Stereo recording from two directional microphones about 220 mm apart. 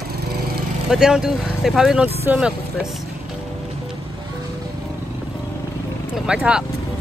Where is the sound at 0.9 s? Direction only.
5° right (ahead or behind).